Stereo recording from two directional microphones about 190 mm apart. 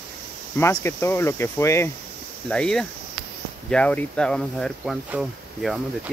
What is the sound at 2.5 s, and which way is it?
Speech, 5° left (ahead or behind).